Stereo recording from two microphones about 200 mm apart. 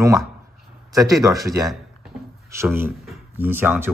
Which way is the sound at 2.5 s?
10° right (ahead or behind).